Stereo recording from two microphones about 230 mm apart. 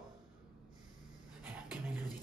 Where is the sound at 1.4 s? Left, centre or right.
Centre.